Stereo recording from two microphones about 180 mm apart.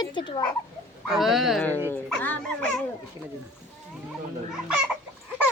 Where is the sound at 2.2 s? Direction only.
10° left (ahead or behind).